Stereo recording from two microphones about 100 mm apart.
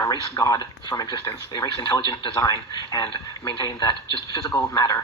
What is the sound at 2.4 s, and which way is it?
A man's voice, 40° left (ahead or behind).